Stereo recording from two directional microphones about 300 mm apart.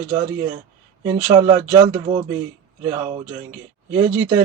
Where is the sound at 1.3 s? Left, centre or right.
Centre.